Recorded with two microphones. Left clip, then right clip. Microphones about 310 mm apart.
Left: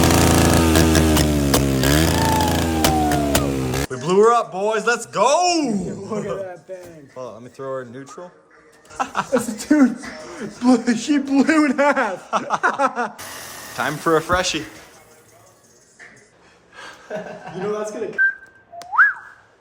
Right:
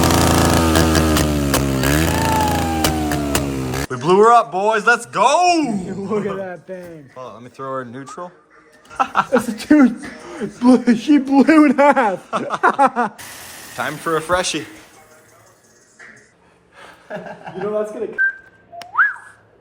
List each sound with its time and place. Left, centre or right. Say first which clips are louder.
0.0 s chainsaw: right 1 dB; centre
6.1 s a sound: right 4 dB; centre
6.4 s a man's voice: right 2 dB; right
7.2 s speech: even; centre
9.6 s a man's voice: right 4 dB; right
12.2 s a sound: left 1 dB; centre
12.8 s a man's voice: right 5 dB; centre
13.7 s speech: left 2 dB; centre